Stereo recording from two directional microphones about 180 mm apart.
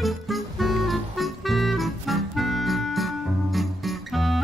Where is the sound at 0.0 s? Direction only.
Centre (ahead or behind).